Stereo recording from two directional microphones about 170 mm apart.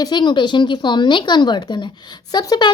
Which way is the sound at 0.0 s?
25° left (ahead or behind).